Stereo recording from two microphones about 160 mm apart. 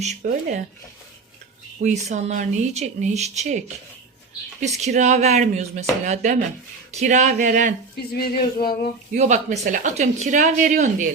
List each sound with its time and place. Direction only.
0.0 s speech: 50° right (ahead or behind)
1.8 s speech: 45° right (ahead or behind)
4.9 s speech: 45° right (ahead or behind)
8.2 s a sound: 70° left (ahead or behind)
9.1 s speech: 45° right (ahead or behind)